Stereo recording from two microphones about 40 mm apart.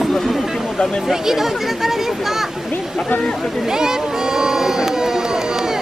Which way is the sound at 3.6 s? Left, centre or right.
Centre.